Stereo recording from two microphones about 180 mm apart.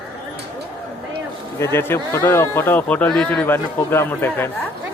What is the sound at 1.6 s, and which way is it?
Speech, 15° left (ahead or behind).